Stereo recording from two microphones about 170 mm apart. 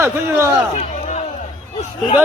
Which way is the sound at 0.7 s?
45° left (ahead or behind).